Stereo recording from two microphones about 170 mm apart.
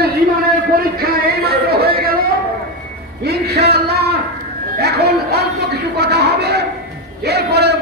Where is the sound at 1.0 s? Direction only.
65° right (ahead or behind).